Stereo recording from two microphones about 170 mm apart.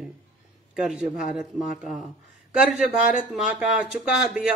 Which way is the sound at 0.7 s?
5° right (ahead or behind).